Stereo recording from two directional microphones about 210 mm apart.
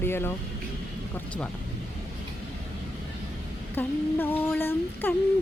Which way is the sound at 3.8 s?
10° left (ahead or behind).